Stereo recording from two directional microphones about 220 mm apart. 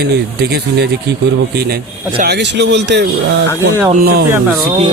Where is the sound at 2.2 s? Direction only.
50° right (ahead or behind).